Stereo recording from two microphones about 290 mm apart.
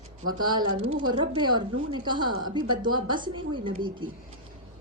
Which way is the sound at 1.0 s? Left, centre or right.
Centre.